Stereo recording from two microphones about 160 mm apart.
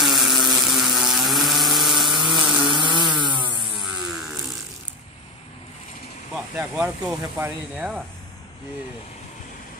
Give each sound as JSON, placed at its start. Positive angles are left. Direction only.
{"t": 0.0, "sound": "a sound", "side_deg": 0}
{"t": 2.6, "sound": "chainsaw", "side_deg": -30}
{"t": 3.8, "sound": "vehicle", "side_deg": 0}
{"t": 6.5, "sound": "speech", "side_deg": -5}